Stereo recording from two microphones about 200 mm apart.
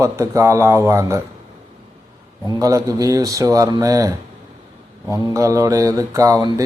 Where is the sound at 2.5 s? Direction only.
15° right (ahead or behind).